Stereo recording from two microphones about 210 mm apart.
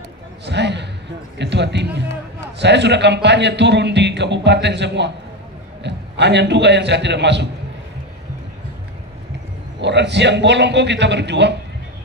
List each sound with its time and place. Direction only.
0.5 s a sound: 55° right (ahead or behind)
1.4 s a man's voice: 55° right (ahead or behind)
9.8 s a man's voice: 55° right (ahead or behind)